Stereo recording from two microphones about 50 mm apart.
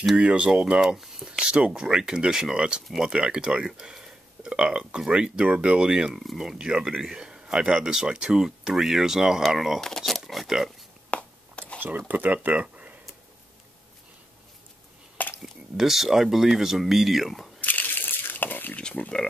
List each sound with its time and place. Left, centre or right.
0.1 s speech: right; by 9.8 s centre
9.8 s speech: centre
11.1 s a sound: left
12.1 s speech: right
15.4 s speech: centre
17.6 s crumpling: left
19.0 s speech: left